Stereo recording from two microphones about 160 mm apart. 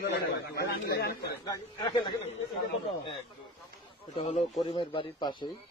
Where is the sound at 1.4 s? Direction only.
25° left (ahead or behind).